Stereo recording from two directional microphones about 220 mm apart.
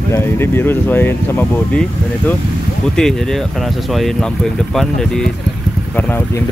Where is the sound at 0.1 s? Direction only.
10° left (ahead or behind).